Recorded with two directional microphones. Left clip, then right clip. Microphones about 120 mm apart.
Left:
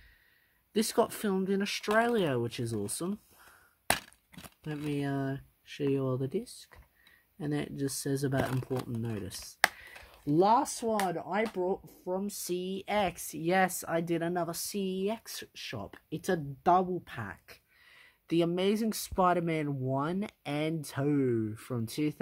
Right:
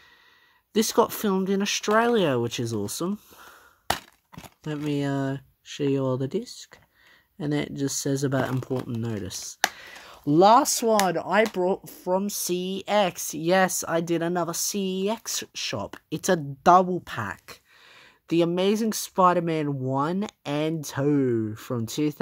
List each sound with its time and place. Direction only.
0.7 s speech: 30° right (ahead or behind)
4.6 s speech: 35° right (ahead or behind)
10.0 s speech: 65° right (ahead or behind); by 12.3 s 80° right
12.3 s speech: 45° right (ahead or behind)
17.9 s speech: 25° right (ahead or behind)